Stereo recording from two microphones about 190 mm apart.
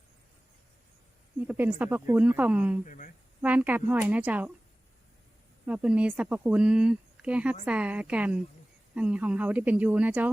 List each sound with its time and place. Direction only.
1.5 s speech: 10° right (ahead or behind)
2.8 s speech: 40° left (ahead or behind)
3.4 s speech: 10° right (ahead or behind)
5.6 s speech: 5° right (ahead or behind)